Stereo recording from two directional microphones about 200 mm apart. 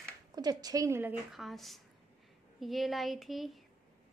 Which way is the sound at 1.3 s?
Centre (ahead or behind).